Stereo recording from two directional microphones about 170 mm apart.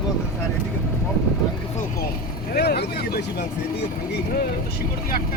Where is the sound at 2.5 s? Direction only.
70° left (ahead or behind).